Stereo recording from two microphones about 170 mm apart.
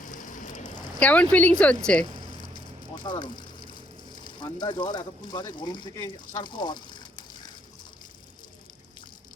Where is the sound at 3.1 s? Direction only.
30° left (ahead or behind).